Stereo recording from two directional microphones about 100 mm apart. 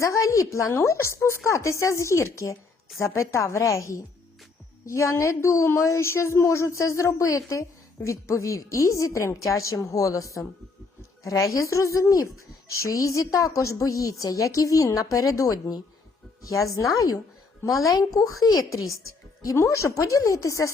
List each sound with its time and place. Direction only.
0.0 s a woman's voice: 30° left (ahead or behind)